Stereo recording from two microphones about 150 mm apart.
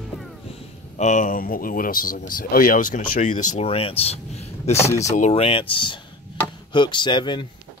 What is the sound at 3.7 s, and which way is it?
Speech, 40° left (ahead or behind).